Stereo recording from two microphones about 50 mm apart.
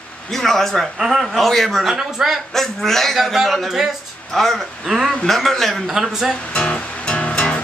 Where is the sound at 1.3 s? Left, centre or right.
Centre.